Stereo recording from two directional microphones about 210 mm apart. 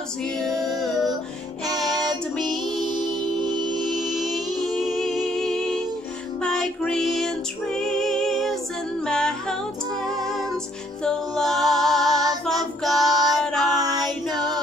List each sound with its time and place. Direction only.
0.2 s female singing: centre (ahead or behind)
2.7 s music: 20° right (ahead or behind)
3.7 s music: centre (ahead or behind)
11.1 s a capella: centre (ahead or behind)
12.2 s child singing: 20° right (ahead or behind)
12.8 s child singing: centre (ahead or behind)
13.3 s female singing: centre (ahead or behind)